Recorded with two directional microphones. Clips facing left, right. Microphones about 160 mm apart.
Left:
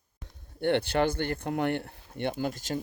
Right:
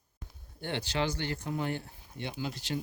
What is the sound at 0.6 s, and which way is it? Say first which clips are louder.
Speech: left 7 dB; 60° left (ahead or behind).